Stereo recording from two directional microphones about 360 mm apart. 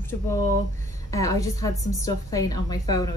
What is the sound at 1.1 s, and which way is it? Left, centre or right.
A woman's voice, centre.